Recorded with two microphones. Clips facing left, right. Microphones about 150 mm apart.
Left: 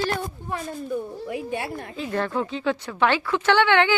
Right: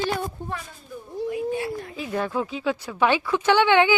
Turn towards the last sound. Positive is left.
turn(degrees=-15)  # may be behind; listen again after turning